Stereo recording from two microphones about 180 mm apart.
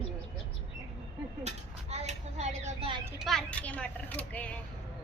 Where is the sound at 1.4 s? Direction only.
35° right (ahead or behind).